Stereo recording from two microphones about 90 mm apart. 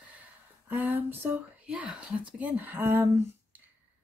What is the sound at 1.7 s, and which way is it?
Speech, 10° right (ahead or behind).